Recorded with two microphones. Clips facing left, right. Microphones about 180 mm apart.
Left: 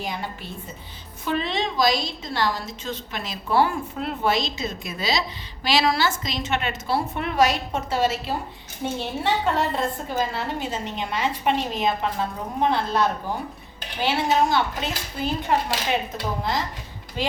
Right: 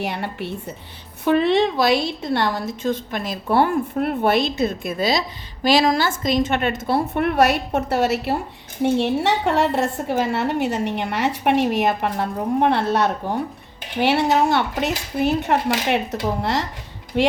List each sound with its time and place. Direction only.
0.0 s a woman's voice: 70° right (ahead or behind)